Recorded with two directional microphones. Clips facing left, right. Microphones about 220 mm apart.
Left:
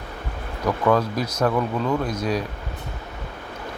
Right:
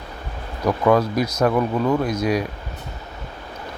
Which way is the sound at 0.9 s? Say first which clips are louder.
Right 3 dB; 10° right (ahead or behind).